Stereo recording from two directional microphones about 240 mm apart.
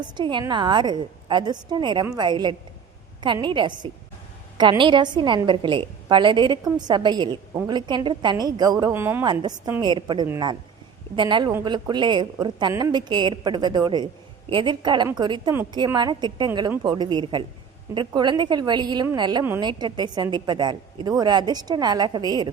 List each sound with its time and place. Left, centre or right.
0.0 s a woman's voice: centre